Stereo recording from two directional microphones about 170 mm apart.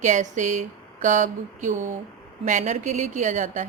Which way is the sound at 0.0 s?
45° right (ahead or behind).